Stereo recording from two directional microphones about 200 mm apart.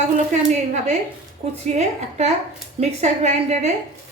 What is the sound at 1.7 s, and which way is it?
A woman's voice, 35° right (ahead or behind).